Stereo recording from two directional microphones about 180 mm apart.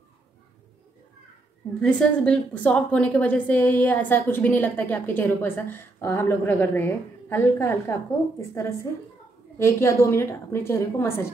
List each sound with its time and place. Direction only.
1.8 s a woman's voice: 5° left (ahead or behind)